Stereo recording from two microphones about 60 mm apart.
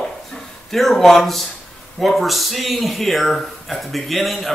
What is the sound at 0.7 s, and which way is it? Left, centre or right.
Speech, centre.